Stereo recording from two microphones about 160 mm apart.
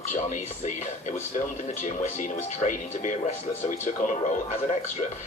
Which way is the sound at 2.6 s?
50° left (ahead or behind).